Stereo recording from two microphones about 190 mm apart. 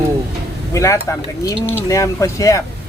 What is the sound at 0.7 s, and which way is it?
Speech, 15° left (ahead or behind).